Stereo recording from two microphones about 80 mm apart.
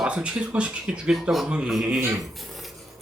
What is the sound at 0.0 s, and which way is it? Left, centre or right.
Speech, centre.